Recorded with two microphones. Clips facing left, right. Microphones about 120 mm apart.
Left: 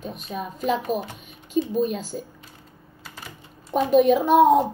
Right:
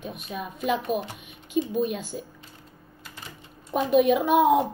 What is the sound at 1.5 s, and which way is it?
Child singing, centre (ahead or behind).